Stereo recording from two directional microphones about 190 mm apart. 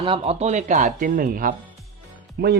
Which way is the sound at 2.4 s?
60° right (ahead or behind).